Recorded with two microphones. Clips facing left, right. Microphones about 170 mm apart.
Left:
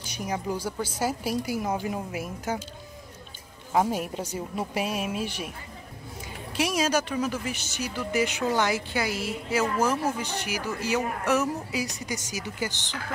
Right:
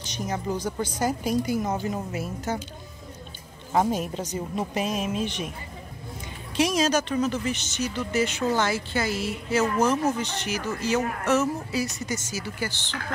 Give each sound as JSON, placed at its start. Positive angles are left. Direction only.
{"t": 0.0, "sound": "speech", "side_deg": 10}
{"t": 3.7, "sound": "speech", "side_deg": 10}
{"t": 6.5, "sound": "speech", "side_deg": 10}